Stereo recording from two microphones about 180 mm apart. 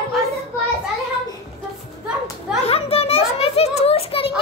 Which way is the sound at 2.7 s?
35° left (ahead or behind).